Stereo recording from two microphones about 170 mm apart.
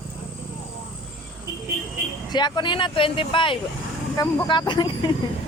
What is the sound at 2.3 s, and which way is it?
Speech, 25° left (ahead or behind).